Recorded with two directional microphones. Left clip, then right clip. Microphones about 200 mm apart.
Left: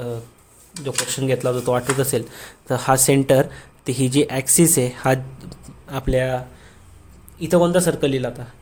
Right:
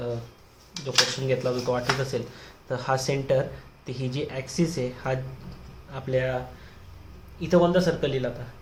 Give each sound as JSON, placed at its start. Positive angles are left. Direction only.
{"t": 0.9, "sound": "a man's voice", "side_deg": 55}
{"t": 7.3, "sound": "a man's voice", "side_deg": 45}